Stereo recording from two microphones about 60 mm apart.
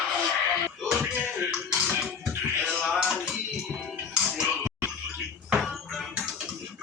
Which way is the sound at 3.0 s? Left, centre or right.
Centre.